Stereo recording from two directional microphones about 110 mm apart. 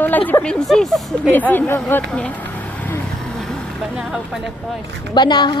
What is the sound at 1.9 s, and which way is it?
Vehicle, 15° left (ahead or behind).